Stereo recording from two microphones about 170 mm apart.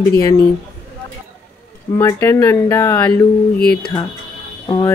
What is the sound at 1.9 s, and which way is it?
Speech, 15° left (ahead or behind).